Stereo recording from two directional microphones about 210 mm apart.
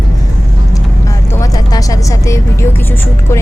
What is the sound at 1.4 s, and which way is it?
Speech, 15° left (ahead or behind).